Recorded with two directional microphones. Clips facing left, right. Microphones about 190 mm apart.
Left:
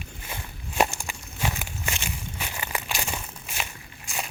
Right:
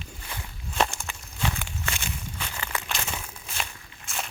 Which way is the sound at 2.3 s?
15° left (ahead or behind).